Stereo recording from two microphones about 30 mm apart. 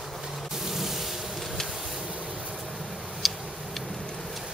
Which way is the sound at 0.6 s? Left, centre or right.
Centre.